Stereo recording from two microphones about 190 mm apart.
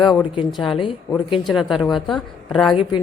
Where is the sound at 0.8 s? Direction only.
25° left (ahead or behind).